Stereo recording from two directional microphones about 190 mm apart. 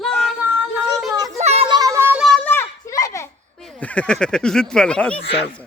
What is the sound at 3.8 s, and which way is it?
Speech, 5° left (ahead or behind).